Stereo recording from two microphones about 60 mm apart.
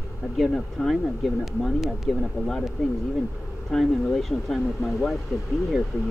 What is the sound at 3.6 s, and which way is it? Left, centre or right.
Speech, centre.